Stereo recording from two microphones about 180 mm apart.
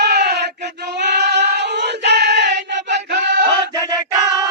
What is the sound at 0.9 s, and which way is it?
Female singing, 70° right (ahead or behind).